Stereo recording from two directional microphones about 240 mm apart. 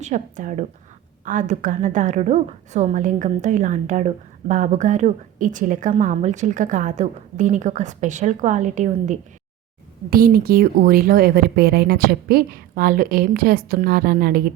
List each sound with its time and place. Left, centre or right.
0.0 s a woman's voice: right